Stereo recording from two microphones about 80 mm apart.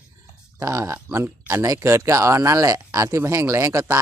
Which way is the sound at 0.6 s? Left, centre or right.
Right.